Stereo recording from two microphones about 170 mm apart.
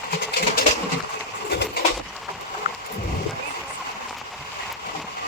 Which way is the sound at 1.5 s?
75° left (ahead or behind).